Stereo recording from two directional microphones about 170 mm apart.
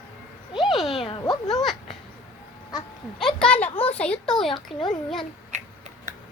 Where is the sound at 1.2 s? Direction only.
25° left (ahead or behind).